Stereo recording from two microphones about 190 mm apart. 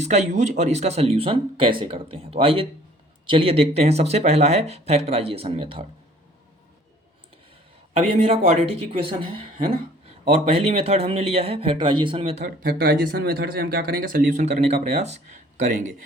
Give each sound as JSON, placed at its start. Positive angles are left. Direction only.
{"t": 0.0, "sound": "speech", "side_deg": -35}
{"t": 7.9, "sound": "speech", "side_deg": -35}
{"t": 12.6, "sound": "speech", "side_deg": -50}